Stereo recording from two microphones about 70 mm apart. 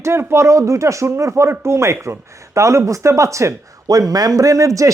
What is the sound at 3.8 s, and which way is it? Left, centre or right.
Speech, right.